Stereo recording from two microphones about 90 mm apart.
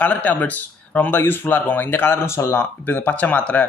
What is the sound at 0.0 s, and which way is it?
Speech, 15° left (ahead or behind).